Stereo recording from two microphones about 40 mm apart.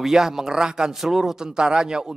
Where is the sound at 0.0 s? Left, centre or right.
Centre.